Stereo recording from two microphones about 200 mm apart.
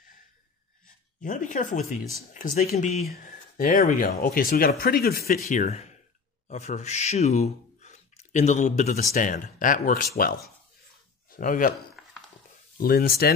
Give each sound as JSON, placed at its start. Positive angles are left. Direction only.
{"t": 0.8, "sound": "speech", "side_deg": 40}
{"t": 12.7, "sound": "speech", "side_deg": 45}